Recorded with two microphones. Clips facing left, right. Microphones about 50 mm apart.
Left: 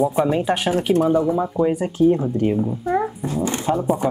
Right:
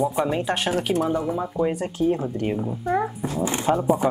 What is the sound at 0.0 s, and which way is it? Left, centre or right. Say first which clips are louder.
Speech: left 4 dB; centre.